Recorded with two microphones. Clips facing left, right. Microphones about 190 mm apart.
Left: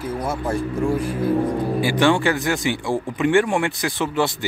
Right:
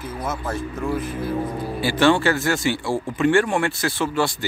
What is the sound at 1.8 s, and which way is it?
Speech, 15° left (ahead or behind).